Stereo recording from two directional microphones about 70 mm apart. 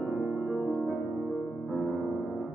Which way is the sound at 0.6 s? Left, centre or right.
Centre.